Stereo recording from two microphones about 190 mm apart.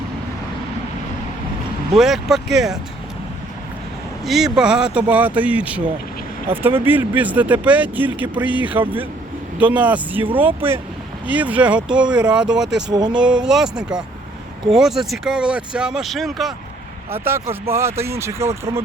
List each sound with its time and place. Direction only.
1.9 s speech: centre (ahead or behind)
4.3 s speech: centre (ahead or behind)
12.9 s speech: 20° right (ahead or behind)
13.1 s speech: 5° right (ahead or behind)
17.1 s speech: 10° right (ahead or behind)